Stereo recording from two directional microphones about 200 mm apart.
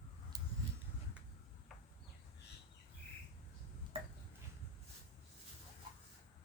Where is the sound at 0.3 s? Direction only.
20° right (ahead or behind).